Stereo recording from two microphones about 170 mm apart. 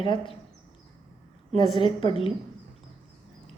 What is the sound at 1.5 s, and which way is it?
Speech, 30° left (ahead or behind).